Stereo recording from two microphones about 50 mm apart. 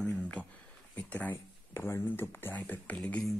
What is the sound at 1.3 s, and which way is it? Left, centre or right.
Speech, left.